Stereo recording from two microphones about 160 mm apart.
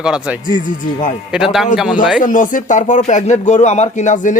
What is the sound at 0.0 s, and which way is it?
A man's voice, 5° right (ahead or behind).